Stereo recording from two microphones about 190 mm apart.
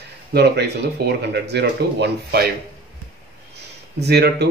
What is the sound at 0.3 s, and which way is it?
Speech, 60° right (ahead or behind).